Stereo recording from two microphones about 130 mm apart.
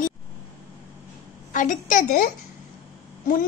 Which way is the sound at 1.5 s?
75° left (ahead or behind).